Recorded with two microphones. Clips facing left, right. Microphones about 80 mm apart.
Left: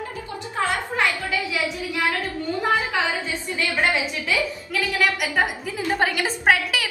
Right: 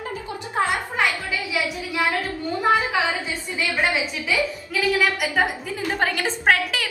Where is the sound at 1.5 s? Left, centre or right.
Centre.